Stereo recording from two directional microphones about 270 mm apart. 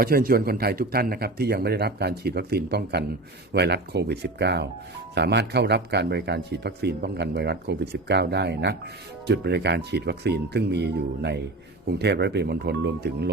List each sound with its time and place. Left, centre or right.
0.0 s speech: right